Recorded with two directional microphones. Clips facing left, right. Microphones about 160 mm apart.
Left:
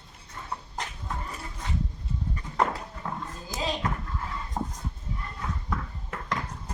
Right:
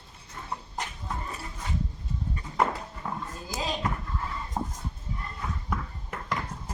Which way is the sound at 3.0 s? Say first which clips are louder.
Even; 10° right (ahead or behind).